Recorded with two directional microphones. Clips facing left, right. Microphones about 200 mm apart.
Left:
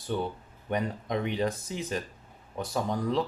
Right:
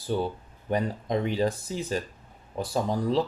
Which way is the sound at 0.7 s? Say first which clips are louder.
Right 3 dB; 30° right (ahead or behind).